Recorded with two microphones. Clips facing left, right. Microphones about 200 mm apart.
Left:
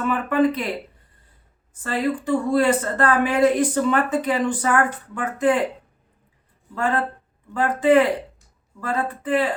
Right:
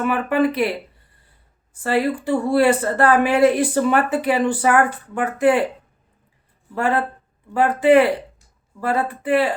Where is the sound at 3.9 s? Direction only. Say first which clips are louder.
Right 2 dB; 70° right (ahead or behind).